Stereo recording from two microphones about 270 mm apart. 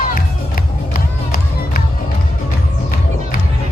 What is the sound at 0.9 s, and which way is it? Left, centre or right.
Music, left.